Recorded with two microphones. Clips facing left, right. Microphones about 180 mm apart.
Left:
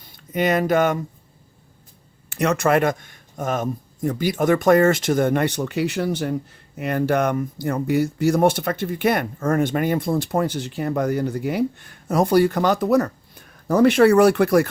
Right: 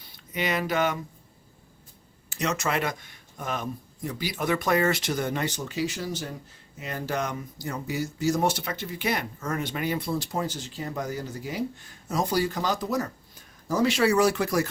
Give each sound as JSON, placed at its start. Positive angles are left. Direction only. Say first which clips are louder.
{"t": 0.0, "sound": "speech", "louder": "left 9 dB", "side_deg": 50}
{"t": 2.3, "sound": "speech", "louder": "left 9 dB", "side_deg": 60}